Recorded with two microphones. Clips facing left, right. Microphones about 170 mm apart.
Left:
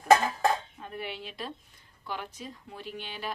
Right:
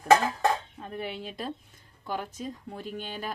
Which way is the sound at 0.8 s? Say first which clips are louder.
Right 3 dB; 40° right (ahead or behind).